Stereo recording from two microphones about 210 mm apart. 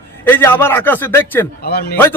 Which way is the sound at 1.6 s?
50° left (ahead or behind).